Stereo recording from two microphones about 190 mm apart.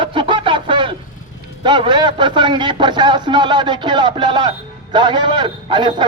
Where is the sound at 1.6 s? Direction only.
25° right (ahead or behind).